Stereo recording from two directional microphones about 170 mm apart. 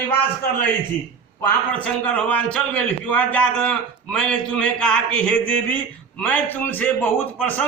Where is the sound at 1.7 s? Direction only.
10° left (ahead or behind).